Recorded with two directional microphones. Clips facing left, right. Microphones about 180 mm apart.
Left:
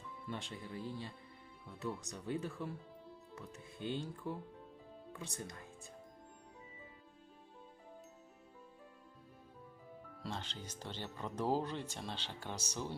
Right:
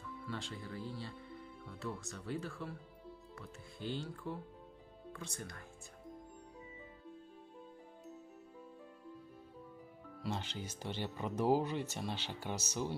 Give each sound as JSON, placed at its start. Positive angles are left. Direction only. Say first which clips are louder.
{"t": 0.3, "sound": "speech", "louder": "even", "side_deg": 20}
{"t": 10.3, "sound": "speech", "louder": "right 3 dB", "side_deg": -10}